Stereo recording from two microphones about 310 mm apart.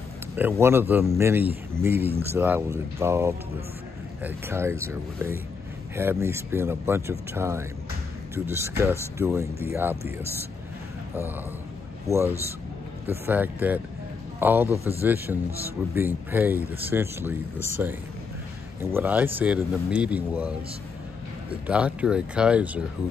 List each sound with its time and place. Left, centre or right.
0.4 s speech: centre
12.1 s a man's voice: centre
21.6 s a man's voice: centre